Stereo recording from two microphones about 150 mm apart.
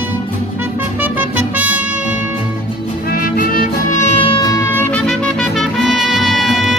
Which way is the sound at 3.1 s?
70° left (ahead or behind).